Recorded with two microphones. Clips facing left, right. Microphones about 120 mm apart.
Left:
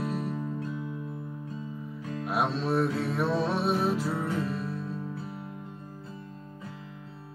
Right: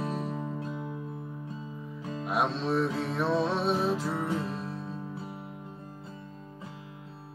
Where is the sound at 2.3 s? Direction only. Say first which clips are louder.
Even; 5° left (ahead or behind).